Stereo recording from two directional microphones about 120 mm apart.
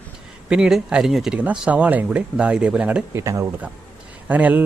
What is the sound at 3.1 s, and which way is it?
Speech, 25° right (ahead or behind).